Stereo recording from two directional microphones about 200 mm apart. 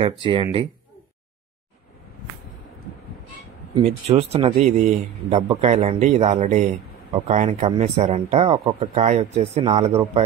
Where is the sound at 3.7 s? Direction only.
30° right (ahead or behind).